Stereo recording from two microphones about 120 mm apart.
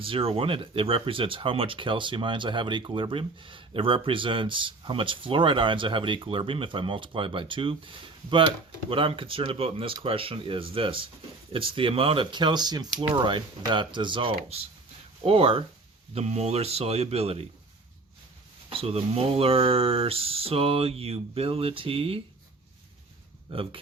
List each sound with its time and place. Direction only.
0.0 s speech: 50° right (ahead or behind)
8.9 s speech: 45° right (ahead or behind)
16.1 s speech: 65° right (ahead or behind)
18.7 s speech: 55° right (ahead or behind)
23.5 s speech: 45° right (ahead or behind)